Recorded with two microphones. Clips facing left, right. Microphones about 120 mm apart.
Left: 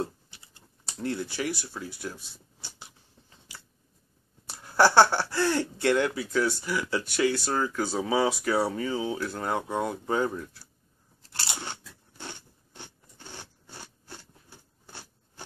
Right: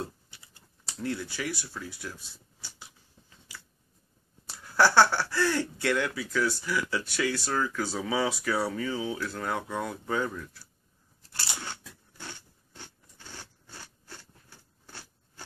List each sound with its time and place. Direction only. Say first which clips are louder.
0.9 s speech: left 2 dB; 25° left (ahead or behind)
2.6 s biting: left 2 dB; 25° left (ahead or behind)
4.5 s speech: left 2 dB; 20° left (ahead or behind)
11.3 s crunch: left 2 dB; 20° left (ahead or behind)